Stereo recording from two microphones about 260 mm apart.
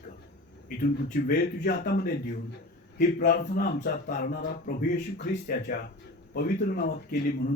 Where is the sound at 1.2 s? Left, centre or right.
Left.